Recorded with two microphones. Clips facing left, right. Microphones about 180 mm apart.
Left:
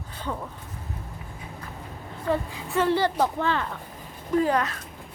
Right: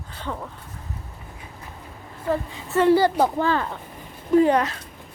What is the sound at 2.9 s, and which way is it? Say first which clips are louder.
Speech: right 7 dB; 35° right (ahead or behind).